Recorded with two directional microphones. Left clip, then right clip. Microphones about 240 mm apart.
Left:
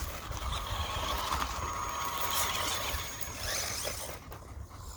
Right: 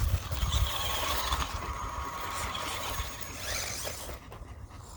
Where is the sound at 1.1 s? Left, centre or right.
Centre.